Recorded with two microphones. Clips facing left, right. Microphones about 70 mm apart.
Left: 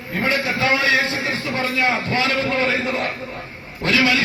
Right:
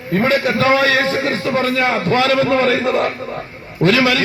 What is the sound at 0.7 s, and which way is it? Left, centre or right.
A man's voice, right.